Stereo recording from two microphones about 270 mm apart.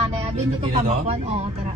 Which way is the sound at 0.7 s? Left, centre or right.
Right.